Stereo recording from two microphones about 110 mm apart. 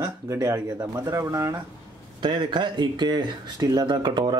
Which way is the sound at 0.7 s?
35° right (ahead or behind).